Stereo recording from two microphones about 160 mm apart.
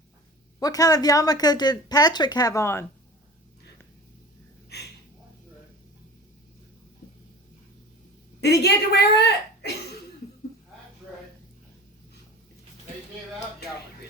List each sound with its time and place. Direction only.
0.6 s a woman's voice: 20° left (ahead or behind)
4.7 s a sound: 90° left
8.4 s a woman's voice: 90° left